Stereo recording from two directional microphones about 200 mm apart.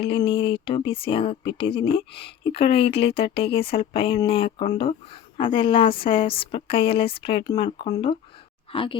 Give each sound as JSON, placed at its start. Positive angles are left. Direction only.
{"t": 0.0, "sound": "speech", "side_deg": 25}